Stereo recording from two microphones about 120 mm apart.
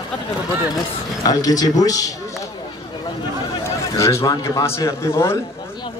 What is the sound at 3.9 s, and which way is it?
A man's voice, 25° left (ahead or behind).